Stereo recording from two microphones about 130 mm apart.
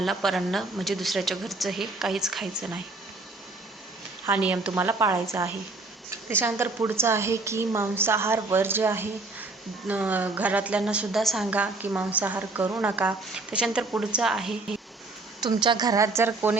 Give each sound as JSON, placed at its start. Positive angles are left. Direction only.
{"t": 0.0, "sound": "a woman's voice", "side_deg": 0}
{"t": 4.3, "sound": "a woman's voice", "side_deg": -10}
{"t": 11.5, "sound": "a woman's voice", "side_deg": -10}
{"t": 15.4, "sound": "a woman's voice", "side_deg": -35}